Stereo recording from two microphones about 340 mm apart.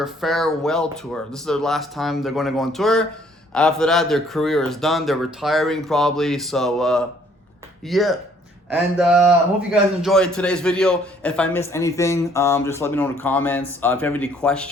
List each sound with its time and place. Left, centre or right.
0.0 s a man's voice: centre